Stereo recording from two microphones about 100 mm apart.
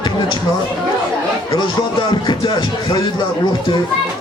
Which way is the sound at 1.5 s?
50° left (ahead or behind).